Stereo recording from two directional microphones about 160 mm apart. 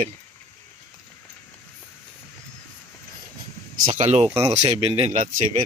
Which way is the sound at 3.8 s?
45° right (ahead or behind).